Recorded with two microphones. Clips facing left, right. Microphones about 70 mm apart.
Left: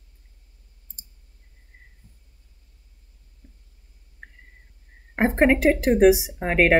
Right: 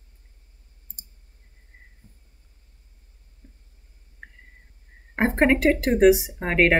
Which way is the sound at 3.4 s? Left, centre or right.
Right.